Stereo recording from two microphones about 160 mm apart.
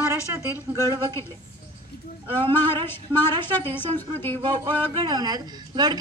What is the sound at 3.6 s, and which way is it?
Speech, 10° left (ahead or behind).